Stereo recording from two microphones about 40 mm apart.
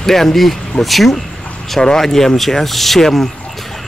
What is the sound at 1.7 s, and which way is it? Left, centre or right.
Speech, centre.